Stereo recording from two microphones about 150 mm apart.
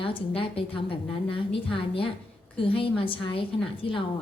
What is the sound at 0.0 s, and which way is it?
A woman's voice, 35° left (ahead or behind).